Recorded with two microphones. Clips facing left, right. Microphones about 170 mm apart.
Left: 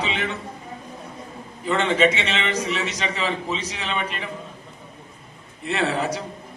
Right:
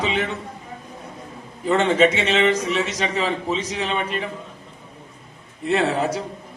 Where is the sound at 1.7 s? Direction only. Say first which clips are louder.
Right 3 dB; 45° right (ahead or behind).